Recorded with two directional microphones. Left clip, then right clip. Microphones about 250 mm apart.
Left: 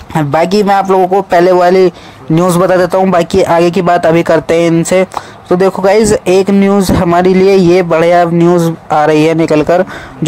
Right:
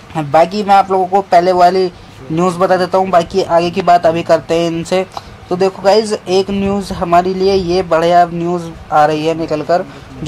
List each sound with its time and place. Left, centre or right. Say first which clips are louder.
0.1 s speech: left 1 dB; left